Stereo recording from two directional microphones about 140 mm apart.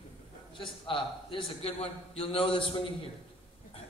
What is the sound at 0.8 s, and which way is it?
A man's voice, 35° left (ahead or behind).